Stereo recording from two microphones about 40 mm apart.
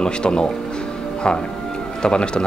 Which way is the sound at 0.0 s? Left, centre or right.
Left.